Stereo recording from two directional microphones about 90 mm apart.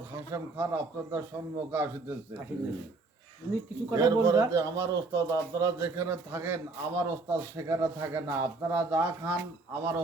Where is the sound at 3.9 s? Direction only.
35° right (ahead or behind).